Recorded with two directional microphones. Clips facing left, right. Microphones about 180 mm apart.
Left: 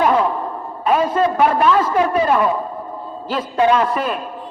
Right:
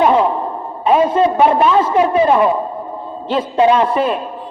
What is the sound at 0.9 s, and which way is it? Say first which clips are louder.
A man's voice: right 4 dB; 25° right (ahead or behind).